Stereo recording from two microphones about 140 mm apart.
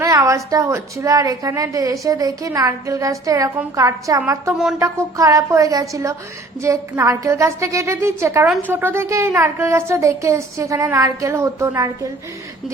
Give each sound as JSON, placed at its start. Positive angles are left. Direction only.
{"t": 0.0, "sound": "a woman's voice", "side_deg": -20}